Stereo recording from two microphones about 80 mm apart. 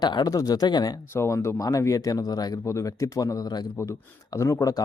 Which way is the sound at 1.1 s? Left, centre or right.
Left.